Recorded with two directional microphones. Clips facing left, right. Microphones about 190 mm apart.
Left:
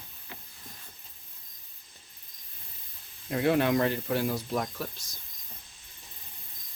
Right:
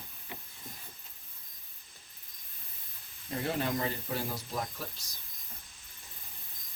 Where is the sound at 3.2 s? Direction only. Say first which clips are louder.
Left 8 dB; 65° left (ahead or behind).